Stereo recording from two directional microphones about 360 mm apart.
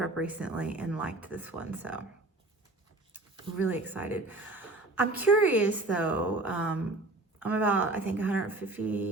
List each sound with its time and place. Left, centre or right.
0.0 s speech: centre
3.1 s speech: centre